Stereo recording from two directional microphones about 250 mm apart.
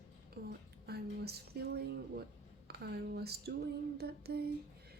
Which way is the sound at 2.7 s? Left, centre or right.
Right.